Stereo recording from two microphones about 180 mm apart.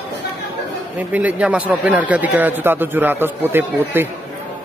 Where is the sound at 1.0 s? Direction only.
10° right (ahead or behind).